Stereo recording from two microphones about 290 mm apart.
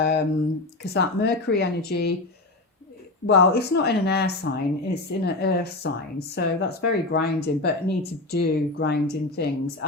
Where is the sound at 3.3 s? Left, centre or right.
Left.